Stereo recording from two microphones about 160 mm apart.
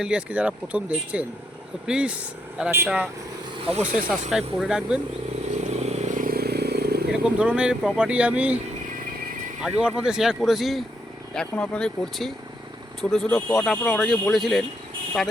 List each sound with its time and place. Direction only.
0.0 s speech: 5° right (ahead or behind)
4.1 s speech: centre (ahead or behind)
5.5 s vehicle: 40° right (ahead or behind); by 7.0 s 85° right
7.1 s speech: 5° right (ahead or behind)